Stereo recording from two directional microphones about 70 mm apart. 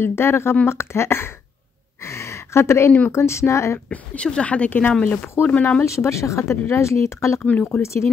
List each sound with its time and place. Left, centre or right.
0.0 s speech: left
2.0 s a sound: left
3.1 s speech: left
3.9 s speech: centre
5.9 s speech: left